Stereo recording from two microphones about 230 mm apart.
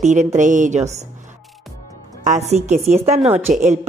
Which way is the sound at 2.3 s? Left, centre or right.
Right.